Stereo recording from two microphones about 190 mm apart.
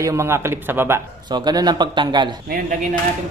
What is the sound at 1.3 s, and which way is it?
A man's voice, 20° right (ahead or behind).